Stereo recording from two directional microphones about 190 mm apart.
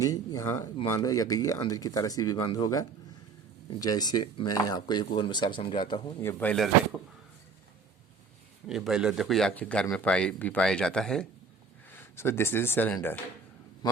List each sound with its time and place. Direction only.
0.0 s speech: 20° left (ahead or behind)
6.2 s speech: 5° left (ahead or behind)
8.6 s speech: centre (ahead or behind)